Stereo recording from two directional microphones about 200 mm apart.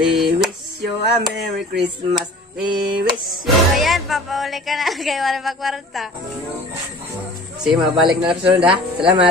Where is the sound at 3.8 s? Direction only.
Centre (ahead or behind).